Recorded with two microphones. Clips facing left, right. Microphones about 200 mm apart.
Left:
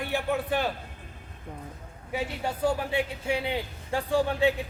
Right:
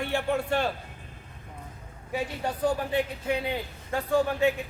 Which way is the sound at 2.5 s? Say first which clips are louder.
Even; 10° left (ahead or behind).